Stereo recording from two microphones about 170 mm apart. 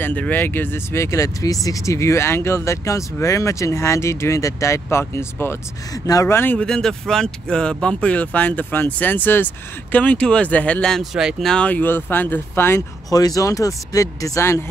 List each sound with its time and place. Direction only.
0.0 s speech: 10° left (ahead or behind)